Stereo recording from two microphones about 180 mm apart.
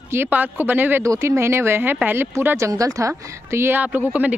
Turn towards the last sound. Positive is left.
turn(degrees=-10)  # may be behind; listen again after turning